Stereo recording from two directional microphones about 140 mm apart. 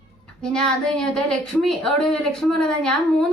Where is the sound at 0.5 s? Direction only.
5° left (ahead or behind).